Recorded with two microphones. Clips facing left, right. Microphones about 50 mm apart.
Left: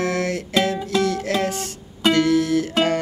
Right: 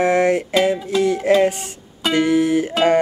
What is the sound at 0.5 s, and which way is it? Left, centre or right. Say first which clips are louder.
Music: right 3 dB; centre.